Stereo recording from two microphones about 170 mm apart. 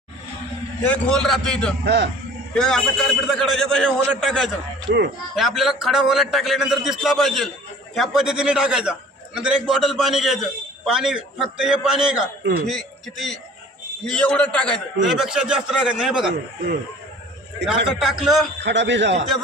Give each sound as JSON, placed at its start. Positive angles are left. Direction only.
{"t": 0.8, "sound": "a man's voice", "side_deg": 5}
{"t": 1.8, "sound": "speech", "side_deg": -80}
{"t": 2.6, "sound": "a man's voice", "side_deg": 0}
{"t": 12.4, "sound": "speech", "side_deg": -70}
{"t": 12.6, "sound": "a man's voice", "side_deg": 0}
{"t": 17.8, "sound": "a man's voice", "side_deg": 0}
{"t": 18.6, "sound": "a man's voice", "side_deg": -90}